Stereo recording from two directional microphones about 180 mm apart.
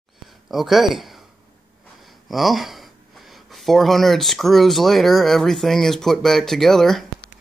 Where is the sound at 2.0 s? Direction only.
Centre (ahead or behind).